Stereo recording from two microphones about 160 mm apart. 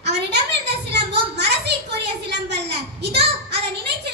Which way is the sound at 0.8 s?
90° right.